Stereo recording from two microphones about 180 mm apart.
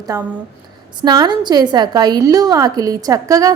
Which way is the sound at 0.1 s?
15° right (ahead or behind).